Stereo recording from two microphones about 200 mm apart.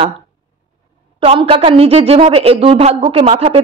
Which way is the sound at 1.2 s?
30° right (ahead or behind).